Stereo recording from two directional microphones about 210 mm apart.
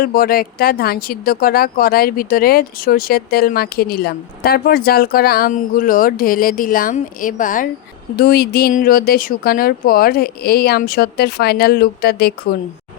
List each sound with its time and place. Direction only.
0.0 s speech: 45° left (ahead or behind)